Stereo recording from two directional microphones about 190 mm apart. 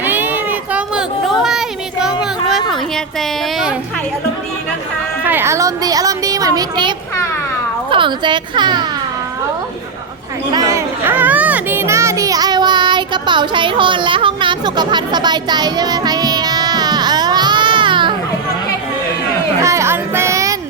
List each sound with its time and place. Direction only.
0.0 s child singing: 10° right (ahead or behind)
0.7 s a sound: 5° right (ahead or behind)
5.2 s speech: 10° right (ahead or behind)
10.5 s children playing: 20° right (ahead or behind)
19.6 s music: 15° right (ahead or behind)